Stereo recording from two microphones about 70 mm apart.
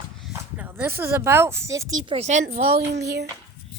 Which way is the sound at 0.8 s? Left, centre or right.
Right.